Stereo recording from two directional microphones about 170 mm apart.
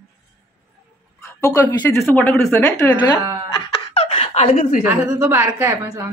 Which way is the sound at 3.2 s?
20° right (ahead or behind).